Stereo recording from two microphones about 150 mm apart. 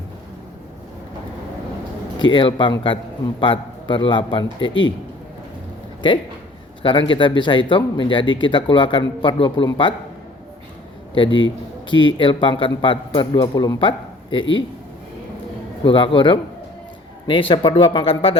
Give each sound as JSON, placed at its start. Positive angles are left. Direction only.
{"t": 2.3, "sound": "speech", "side_deg": 35}
{"t": 6.0, "sound": "speech", "side_deg": 35}
{"t": 11.1, "sound": "a man's voice", "side_deg": 35}
{"t": 15.8, "sound": "speech", "side_deg": 35}